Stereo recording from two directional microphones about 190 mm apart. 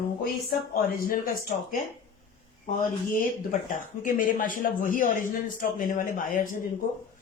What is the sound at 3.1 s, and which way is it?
Speech, 45° left (ahead or behind).